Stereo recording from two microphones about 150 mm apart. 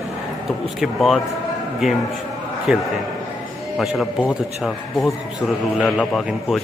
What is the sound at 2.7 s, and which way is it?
Speech, 5° right (ahead or behind).